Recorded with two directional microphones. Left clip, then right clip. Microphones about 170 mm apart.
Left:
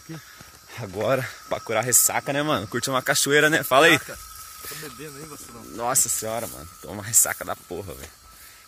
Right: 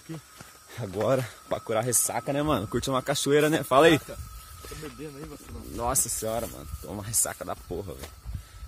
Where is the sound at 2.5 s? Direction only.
15° right (ahead or behind).